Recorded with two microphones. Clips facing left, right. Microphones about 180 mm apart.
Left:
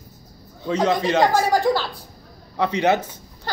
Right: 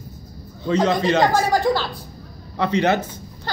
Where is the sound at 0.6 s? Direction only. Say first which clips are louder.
Right 1 dB; 10° left (ahead or behind).